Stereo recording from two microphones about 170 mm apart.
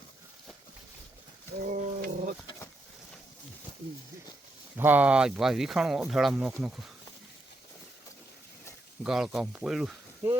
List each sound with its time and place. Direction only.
1.6 s roaring cats: 50° right (ahead or behind)
4.8 s speech: 10° right (ahead or behind)
9.0 s speech: 5° right (ahead or behind)